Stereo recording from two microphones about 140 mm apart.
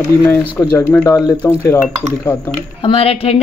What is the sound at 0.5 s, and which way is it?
Speech, 15° left (ahead or behind).